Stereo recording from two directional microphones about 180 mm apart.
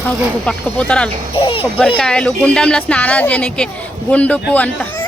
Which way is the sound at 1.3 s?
30° left (ahead or behind).